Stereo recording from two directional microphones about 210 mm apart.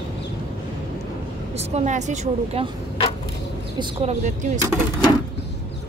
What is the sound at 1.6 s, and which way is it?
A woman's voice, 30° right (ahead or behind).